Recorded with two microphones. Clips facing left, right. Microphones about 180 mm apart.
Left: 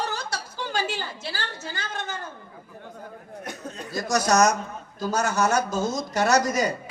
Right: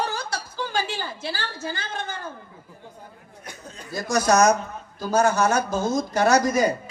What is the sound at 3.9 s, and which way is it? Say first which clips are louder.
Speech: right 2 dB; 55° right (ahead or behind).